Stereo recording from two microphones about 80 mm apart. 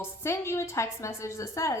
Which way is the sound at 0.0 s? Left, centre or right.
Left.